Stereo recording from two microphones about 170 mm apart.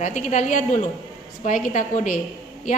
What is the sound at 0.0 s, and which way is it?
Speech, 45° left (ahead or behind).